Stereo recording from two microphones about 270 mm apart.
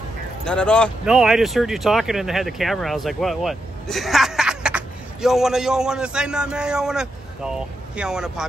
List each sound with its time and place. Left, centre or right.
0.5 s speech: centre